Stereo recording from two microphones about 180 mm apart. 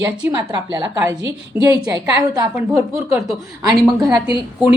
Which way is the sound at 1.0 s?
15° right (ahead or behind).